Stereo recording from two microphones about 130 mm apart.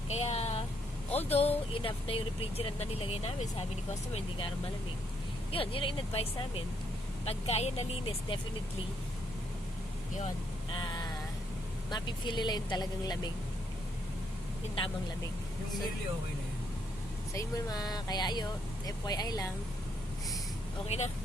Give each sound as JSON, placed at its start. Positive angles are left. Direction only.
{"t": 0.1, "sound": "speech", "side_deg": 55}
{"t": 5.5, "sound": "speech", "side_deg": 45}
{"t": 10.8, "sound": "a sound", "side_deg": 35}
{"t": 11.9, "sound": "speech", "side_deg": 35}
{"t": 17.3, "sound": "speech", "side_deg": 30}
{"t": 20.8, "sound": "speech", "side_deg": 50}